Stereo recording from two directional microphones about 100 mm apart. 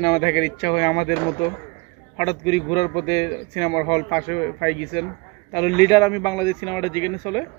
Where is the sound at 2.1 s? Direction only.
40° left (ahead or behind).